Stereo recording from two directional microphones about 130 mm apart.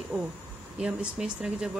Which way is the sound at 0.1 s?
5° right (ahead or behind).